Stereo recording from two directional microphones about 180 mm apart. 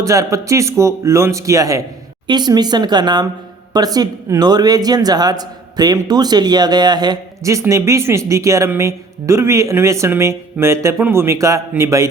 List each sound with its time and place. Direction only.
0.0 s speech: 15° right (ahead or behind)